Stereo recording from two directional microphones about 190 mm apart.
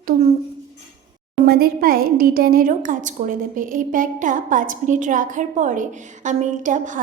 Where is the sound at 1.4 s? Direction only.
55° right (ahead or behind).